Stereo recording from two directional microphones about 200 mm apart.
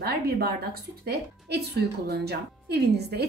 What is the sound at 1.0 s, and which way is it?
A woman's voice, 55° right (ahead or behind).